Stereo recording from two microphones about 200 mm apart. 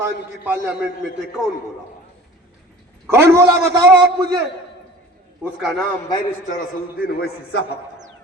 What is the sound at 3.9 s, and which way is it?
Speech, 55° right (ahead or behind).